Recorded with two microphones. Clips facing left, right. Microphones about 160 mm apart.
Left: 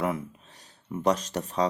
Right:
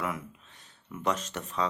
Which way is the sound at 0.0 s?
35° left (ahead or behind).